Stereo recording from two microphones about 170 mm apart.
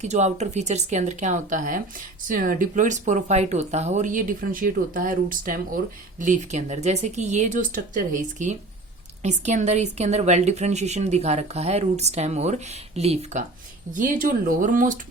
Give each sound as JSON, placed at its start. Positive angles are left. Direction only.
{"t": 0.0, "sound": "a woman's voice", "side_deg": -40}
{"t": 13.9, "sound": "speech", "side_deg": -50}